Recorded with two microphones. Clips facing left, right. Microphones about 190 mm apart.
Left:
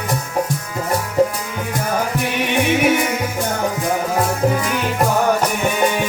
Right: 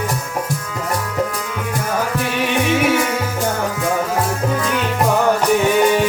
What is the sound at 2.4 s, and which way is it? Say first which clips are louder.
Music: left 1 dB; 20° left (ahead or behind).